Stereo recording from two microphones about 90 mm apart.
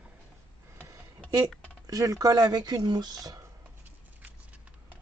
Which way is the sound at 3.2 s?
45° right (ahead or behind).